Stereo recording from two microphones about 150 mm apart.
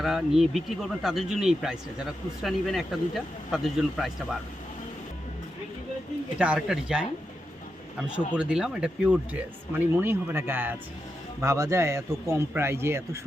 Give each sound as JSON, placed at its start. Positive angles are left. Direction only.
{"t": 0.0, "sound": "speech", "side_deg": 0}
{"t": 6.4, "sound": "speech", "side_deg": -5}
{"t": 8.4, "sound": "speech", "side_deg": -5}